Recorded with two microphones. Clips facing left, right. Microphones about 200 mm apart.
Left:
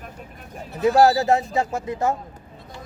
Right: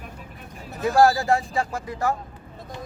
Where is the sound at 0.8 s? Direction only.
20° left (ahead or behind).